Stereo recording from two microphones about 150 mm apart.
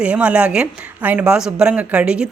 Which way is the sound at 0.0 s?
10° right (ahead or behind).